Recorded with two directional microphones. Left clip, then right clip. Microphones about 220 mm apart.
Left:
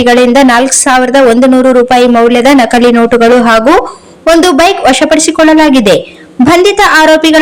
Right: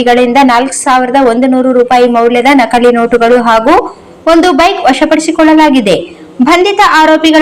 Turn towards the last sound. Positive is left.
turn(degrees=35)  # may be behind; listen again after turning